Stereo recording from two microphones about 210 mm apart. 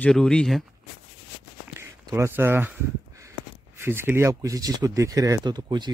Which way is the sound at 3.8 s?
10° right (ahead or behind).